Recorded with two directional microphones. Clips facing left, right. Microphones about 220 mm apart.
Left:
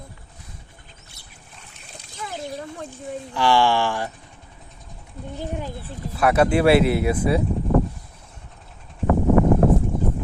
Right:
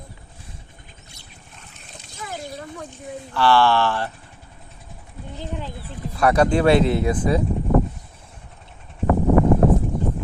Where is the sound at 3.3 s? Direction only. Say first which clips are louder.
Right 2 dB; 15° left (ahead or behind).